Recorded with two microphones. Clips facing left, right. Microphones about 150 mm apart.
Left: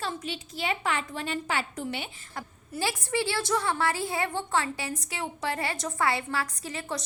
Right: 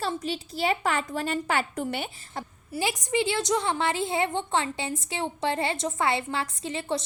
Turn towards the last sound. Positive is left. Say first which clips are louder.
# right 5 dB
turn(degrees=-25)  # may be behind; listen again after turning